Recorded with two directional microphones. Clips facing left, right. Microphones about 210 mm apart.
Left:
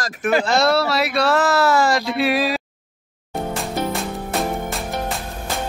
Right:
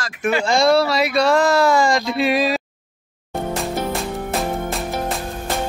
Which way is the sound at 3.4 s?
Centre (ahead or behind).